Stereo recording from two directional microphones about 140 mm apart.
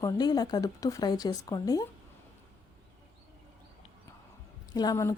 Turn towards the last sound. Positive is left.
turn(degrees=25)  # may be behind; listen again after turning